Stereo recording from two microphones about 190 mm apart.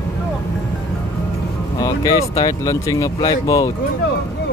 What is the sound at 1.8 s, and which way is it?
Speech, 20° left (ahead or behind).